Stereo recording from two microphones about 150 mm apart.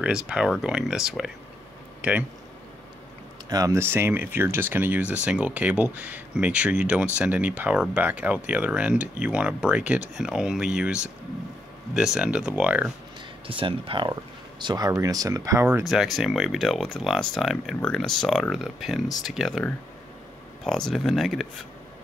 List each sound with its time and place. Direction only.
0.0 s speech: 5° right (ahead or behind)
3.4 s speech: 25° right (ahead or behind)
13.5 s speech: 35° right (ahead or behind); by 15.8 s 15° right (ahead or behind)
15.8 s speech: centre (ahead or behind)
20.6 s speech: 5° left (ahead or behind)